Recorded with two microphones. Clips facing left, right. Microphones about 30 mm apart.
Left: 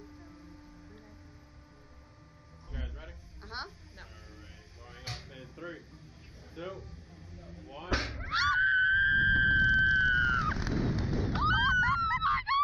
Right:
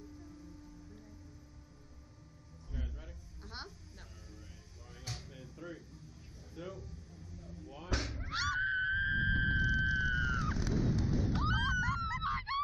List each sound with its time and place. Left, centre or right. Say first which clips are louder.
0.0 s music: left 1 dB; left
2.7 s a sound: left 3 dB; left
6.5 s slam: left 4 dB; left